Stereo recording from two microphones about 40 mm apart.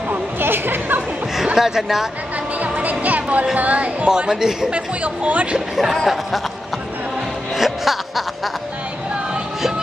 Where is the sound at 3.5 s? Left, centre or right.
Right.